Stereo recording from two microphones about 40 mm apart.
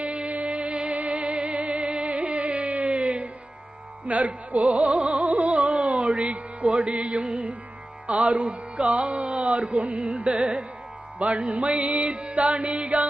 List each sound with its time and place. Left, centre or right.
0.0 s music: right
4.0 s speech: right
4.5 s music: right